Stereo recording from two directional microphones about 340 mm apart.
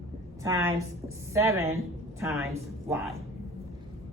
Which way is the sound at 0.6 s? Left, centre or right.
Right.